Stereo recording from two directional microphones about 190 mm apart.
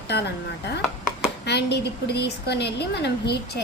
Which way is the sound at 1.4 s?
60° left (ahead or behind).